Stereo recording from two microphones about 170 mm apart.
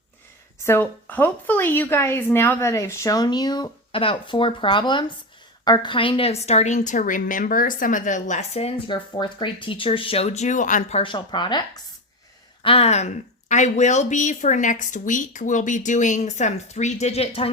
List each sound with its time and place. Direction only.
0.6 s a woman's voice: 15° left (ahead or behind); by 17.5 s 35° left (ahead or behind)